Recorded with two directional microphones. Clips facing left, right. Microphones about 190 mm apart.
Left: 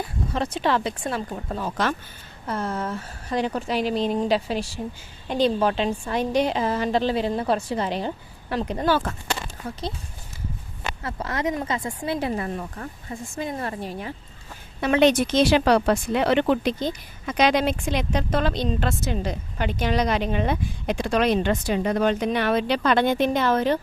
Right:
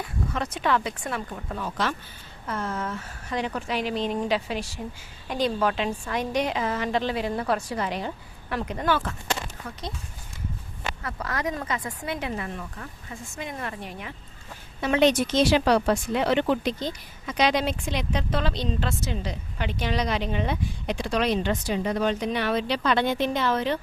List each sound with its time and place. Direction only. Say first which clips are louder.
0.3 s a woman's voice: left 3 dB; 30° left (ahead or behind)
11.0 s a woman's voice: left 4 dB; 25° left (ahead or behind)
14.8 s speech: left 3 dB; 60° left (ahead or behind); by 23.8 s 45° left (ahead or behind)